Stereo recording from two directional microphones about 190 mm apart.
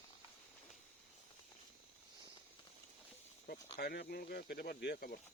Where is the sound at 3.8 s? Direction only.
55° left (ahead or behind).